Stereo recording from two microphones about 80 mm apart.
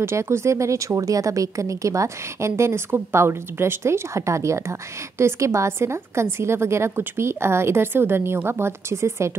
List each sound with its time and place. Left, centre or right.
0.0 s speech: right